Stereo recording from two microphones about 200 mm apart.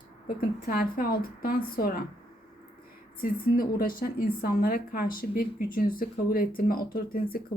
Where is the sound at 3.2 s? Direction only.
45° left (ahead or behind).